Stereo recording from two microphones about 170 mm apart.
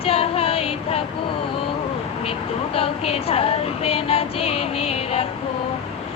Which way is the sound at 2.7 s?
35° left (ahead or behind).